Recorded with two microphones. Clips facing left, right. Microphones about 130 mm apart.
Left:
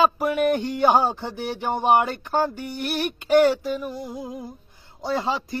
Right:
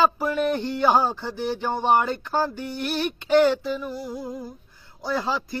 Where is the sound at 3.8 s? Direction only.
15° left (ahead or behind).